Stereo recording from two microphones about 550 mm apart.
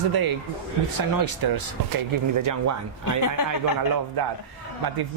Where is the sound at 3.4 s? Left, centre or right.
Left.